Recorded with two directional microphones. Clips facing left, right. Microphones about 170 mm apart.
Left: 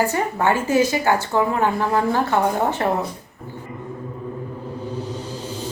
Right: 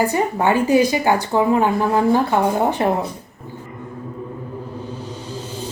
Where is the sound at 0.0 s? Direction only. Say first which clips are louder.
Right 2 dB; 15° right (ahead or behind).